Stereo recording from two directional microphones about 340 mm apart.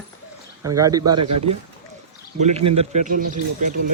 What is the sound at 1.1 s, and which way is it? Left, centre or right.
Speech, right.